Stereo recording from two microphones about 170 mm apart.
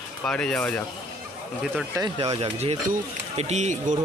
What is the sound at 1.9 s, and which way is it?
Speech, 25° right (ahead or behind).